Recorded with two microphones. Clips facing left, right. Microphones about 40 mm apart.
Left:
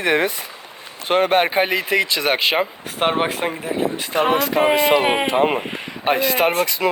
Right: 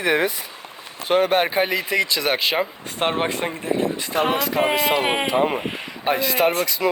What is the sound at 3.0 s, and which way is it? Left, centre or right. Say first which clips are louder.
Speech: left 3 dB; centre.